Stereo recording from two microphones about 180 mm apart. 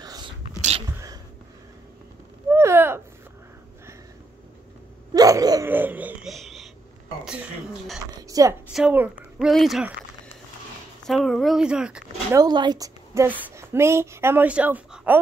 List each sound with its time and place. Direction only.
0.0 s whispering: 20° right (ahead or behind)
0.6 s a sound: 35° right (ahead or behind)
0.9 s sneeze: 20° right (ahead or behind)
2.5 s a sound: 15° right (ahead or behind)
5.1 s speech: 20° right (ahead or behind); by 6.7 s centre (ahead or behind)
7.2 s a sound: centre (ahead or behind)
8.3 s a woman's voice: 20° right (ahead or behind)
8.7 s speech: 5° right (ahead or behind)
11.1 s speech: centre (ahead or behind)
12.4 s a woman's voice: 25° right (ahead or behind)